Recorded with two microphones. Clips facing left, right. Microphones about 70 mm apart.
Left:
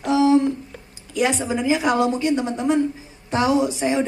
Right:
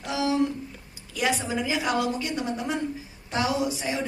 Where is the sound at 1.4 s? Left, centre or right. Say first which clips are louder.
Left 7 dB; left.